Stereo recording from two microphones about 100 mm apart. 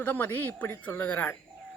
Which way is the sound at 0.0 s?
20° left (ahead or behind).